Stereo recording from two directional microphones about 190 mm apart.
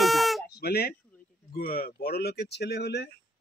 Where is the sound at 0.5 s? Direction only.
55° left (ahead or behind).